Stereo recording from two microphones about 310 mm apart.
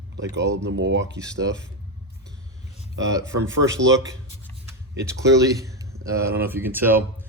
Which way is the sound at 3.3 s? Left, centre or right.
Right.